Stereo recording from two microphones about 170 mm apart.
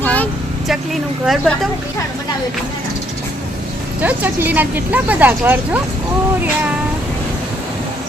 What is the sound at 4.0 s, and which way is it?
Speech, 10° right (ahead or behind).